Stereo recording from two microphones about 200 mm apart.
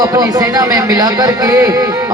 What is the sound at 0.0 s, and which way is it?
A man's voice, 15° right (ahead or behind).